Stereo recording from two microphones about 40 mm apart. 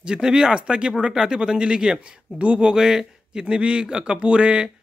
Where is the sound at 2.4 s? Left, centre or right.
Right.